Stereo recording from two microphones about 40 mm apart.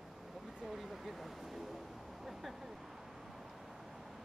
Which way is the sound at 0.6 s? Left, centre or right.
Centre.